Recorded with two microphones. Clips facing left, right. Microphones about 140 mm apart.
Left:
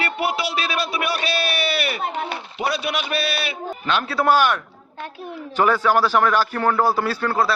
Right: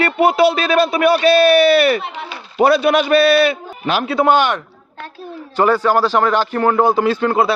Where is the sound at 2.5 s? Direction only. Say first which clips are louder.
Right 13 dB; 50° right (ahead or behind).